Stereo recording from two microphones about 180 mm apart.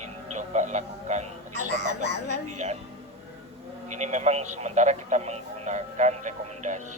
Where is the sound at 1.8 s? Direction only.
70° left (ahead or behind).